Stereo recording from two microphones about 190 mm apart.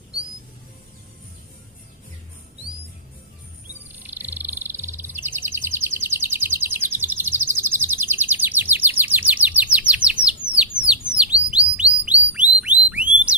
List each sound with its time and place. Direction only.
3.7 s bird: 10° right (ahead or behind)
9.7 s chirp: 5° right (ahead or behind)
10.4 s bird: 5° right (ahead or behind)
12.3 s whistle: 5° right (ahead or behind)